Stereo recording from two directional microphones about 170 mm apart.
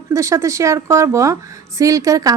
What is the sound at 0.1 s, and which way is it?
Speech, 20° right (ahead or behind).